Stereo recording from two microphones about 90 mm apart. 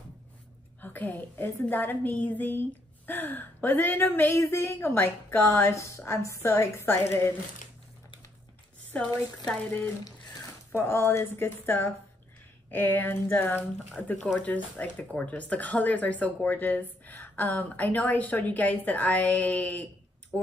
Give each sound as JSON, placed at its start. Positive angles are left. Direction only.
{"t": 0.7, "sound": "a woman's voice", "side_deg": 20}
{"t": 8.9, "sound": "speech", "side_deg": 15}
{"t": 10.7, "sound": "a woman's voice", "side_deg": 25}
{"t": 14.2, "sound": "speech", "side_deg": 5}